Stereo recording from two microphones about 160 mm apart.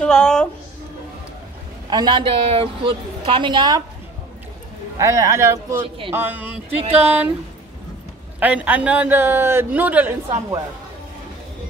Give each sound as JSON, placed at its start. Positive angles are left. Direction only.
{"t": 0.0, "sound": "a woman's voice", "side_deg": 5}
{"t": 1.9, "sound": "a woman's voice", "side_deg": -25}
{"t": 4.9, "sound": "speech", "side_deg": -20}
{"t": 5.8, "sound": "a woman's voice", "side_deg": -35}
{"t": 6.1, "sound": "a man's voice", "side_deg": -10}
{"t": 8.4, "sound": "a man's voice", "side_deg": -10}